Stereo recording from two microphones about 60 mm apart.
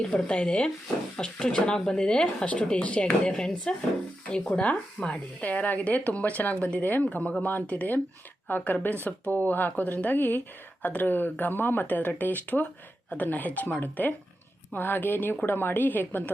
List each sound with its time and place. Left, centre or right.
0.1 s speech: centre; by 16.3 s left